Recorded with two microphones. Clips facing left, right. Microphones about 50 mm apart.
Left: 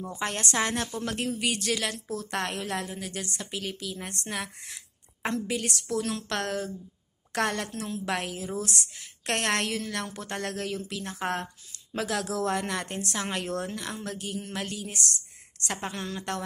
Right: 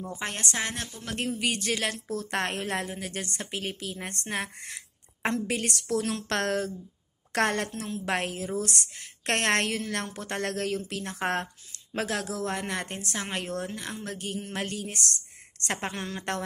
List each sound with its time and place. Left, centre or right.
0.1 s speech: right
1.4 s a woman's voice: right
11.7 s a sound: right
12.4 s speech: right
14.1 s a woman's voice: right
15.9 s a woman's voice: right